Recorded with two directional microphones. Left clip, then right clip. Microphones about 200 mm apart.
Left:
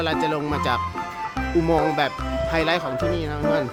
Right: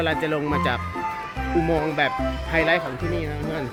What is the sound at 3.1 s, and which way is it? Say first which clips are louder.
Speech: left 5 dB; 25° left (ahead or behind).